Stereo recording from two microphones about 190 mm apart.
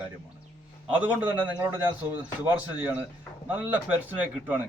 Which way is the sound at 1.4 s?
20° right (ahead or behind).